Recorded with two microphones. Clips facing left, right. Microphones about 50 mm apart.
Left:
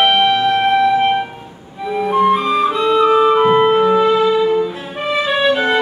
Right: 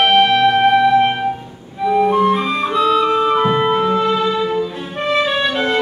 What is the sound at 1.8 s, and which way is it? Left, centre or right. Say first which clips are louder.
Flute: right 2 dB; centre.